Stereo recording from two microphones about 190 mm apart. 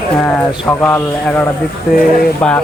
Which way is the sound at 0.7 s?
10° left (ahead or behind).